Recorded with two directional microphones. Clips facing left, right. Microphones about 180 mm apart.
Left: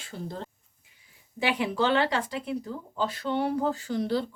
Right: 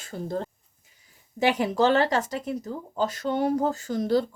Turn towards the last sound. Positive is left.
turn(degrees=-45)  # may be behind; listen again after turning